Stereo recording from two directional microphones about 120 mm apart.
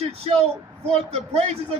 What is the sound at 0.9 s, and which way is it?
Speech, 60° right (ahead or behind).